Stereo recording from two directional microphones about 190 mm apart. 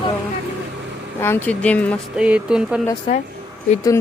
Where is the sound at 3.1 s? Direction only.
30° left (ahead or behind).